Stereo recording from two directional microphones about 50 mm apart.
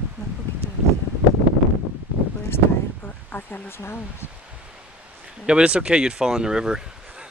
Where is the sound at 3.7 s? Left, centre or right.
Left.